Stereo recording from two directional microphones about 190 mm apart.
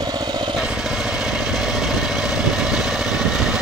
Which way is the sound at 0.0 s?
20° right (ahead or behind).